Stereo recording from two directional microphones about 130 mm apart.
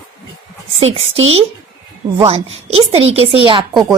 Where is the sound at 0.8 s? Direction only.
50° right (ahead or behind).